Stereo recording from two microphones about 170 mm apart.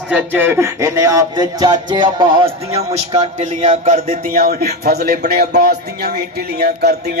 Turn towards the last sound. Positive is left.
turn(degrees=-70)  # may be behind; listen again after turning